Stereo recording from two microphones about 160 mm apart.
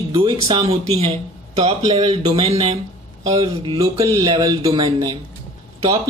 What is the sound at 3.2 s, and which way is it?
Speech, 20° right (ahead or behind).